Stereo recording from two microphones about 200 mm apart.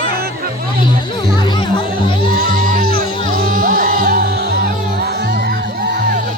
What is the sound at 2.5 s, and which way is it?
Music, 45° right (ahead or behind).